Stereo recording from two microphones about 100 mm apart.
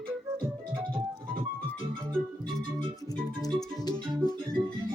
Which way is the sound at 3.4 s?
40° left (ahead or behind).